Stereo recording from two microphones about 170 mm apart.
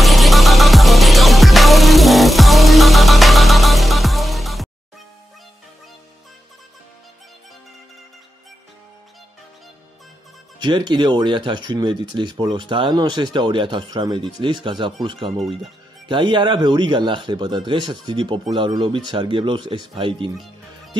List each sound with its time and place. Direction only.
0.0 s music: centre (ahead or behind)
10.6 s speech: 25° right (ahead or behind)